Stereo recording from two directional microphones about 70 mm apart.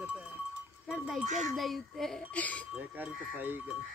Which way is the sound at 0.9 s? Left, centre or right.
Centre.